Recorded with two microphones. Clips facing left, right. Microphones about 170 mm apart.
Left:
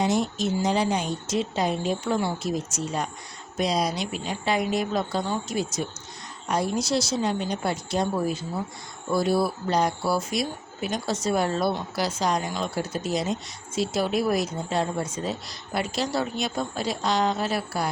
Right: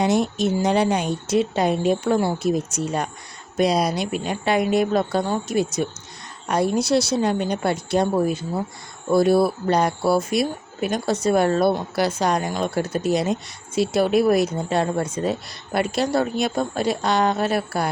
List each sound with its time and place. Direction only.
0.0 s speech: 65° right (ahead or behind)